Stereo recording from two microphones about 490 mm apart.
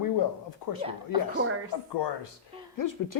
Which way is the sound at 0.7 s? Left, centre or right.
Left.